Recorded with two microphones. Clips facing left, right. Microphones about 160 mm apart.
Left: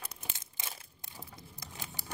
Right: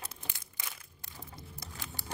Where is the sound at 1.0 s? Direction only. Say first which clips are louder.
Right 1 dB; 20° left (ahead or behind).